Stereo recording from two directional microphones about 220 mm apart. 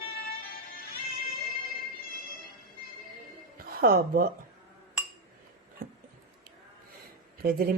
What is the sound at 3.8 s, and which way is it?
Speech, 45° right (ahead or behind).